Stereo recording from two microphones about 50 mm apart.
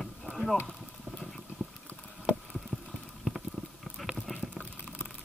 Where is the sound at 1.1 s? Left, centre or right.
Centre.